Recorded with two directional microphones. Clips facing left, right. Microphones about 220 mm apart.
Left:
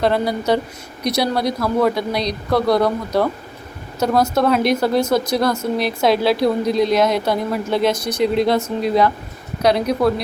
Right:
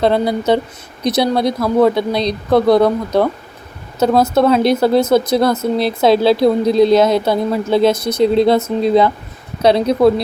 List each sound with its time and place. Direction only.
0.0 s a woman's voice: 25° right (ahead or behind)
9.6 s a woman's voice: 25° right (ahead or behind)